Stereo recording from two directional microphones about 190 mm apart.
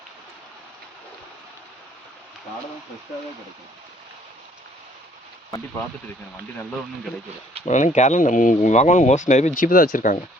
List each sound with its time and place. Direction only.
7.6 s speech: 40° left (ahead or behind)